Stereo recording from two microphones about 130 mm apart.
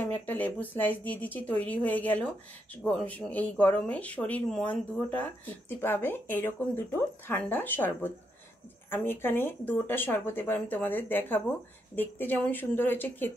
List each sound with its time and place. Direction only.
0.0 s speech: 15° left (ahead or behind)